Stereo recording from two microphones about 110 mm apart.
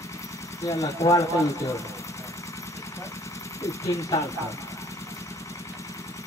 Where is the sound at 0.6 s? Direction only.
30° left (ahead or behind).